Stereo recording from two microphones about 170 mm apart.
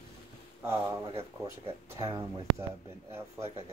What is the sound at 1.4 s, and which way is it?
Speech, 20° right (ahead or behind).